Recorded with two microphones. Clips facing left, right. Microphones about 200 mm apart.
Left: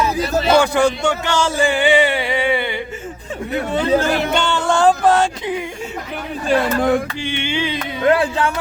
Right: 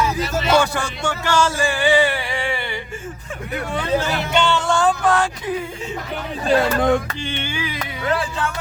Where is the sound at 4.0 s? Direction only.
50° left (ahead or behind); by 5.5 s 25° left (ahead or behind).